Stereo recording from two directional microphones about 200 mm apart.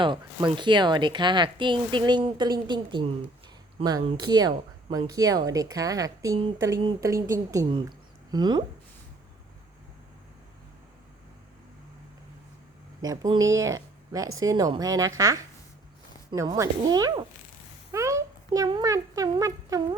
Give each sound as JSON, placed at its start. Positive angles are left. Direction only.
{"t": 0.0, "sound": "speech", "side_deg": -25}
{"t": 13.0, "sound": "speech", "side_deg": -20}
{"t": 16.3, "sound": "a child's voice", "side_deg": -15}